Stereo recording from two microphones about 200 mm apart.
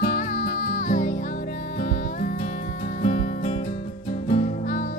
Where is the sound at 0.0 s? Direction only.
40° left (ahead or behind).